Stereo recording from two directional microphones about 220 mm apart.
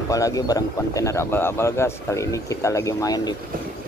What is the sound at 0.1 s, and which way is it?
A man's voice, 15° left (ahead or behind).